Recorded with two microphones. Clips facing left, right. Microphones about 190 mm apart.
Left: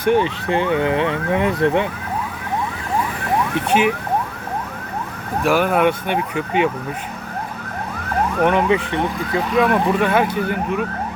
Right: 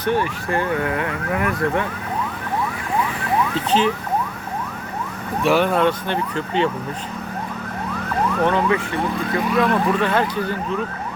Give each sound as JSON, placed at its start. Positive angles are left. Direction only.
{"t": 0.0, "sound": "speech", "side_deg": 20}
{"t": 3.7, "sound": "speech", "side_deg": 10}
{"t": 5.4, "sound": "speech", "side_deg": 10}
{"t": 8.4, "sound": "speech", "side_deg": 20}